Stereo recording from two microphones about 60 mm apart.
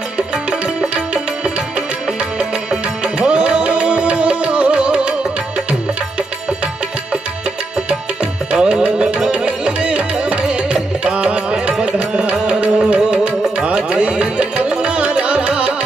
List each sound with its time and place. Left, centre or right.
0.5 s music: centre
2.3 s music: centre
8.5 s music: centre